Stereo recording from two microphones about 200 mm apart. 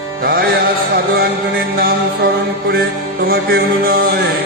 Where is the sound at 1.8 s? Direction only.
50° right (ahead or behind).